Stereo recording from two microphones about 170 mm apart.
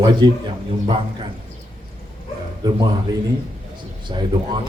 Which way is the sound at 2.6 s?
25° right (ahead or behind).